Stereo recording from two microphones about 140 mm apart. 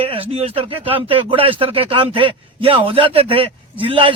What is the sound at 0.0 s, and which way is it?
Speech, 40° right (ahead or behind).